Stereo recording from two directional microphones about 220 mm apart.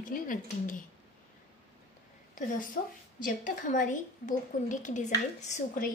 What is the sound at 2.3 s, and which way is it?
A woman's voice, 35° left (ahead or behind).